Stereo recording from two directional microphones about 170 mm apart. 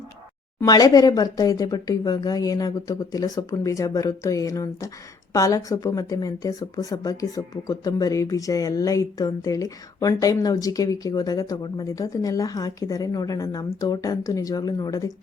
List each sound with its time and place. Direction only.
0.6 s a woman's voice: 20° left (ahead or behind)